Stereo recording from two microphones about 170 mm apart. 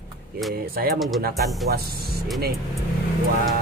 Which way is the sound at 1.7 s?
65° right (ahead or behind).